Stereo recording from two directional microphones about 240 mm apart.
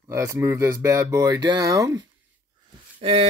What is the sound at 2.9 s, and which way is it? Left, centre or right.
Speech, right.